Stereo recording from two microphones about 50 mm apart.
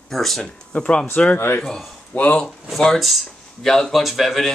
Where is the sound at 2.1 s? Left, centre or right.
Left.